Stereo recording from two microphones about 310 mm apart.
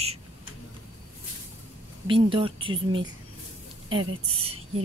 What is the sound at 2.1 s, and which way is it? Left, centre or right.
A woman's voice, centre.